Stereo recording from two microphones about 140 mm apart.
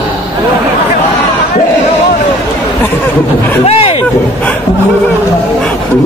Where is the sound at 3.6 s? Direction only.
45° left (ahead or behind).